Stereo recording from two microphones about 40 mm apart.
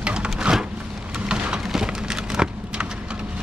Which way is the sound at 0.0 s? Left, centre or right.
Right.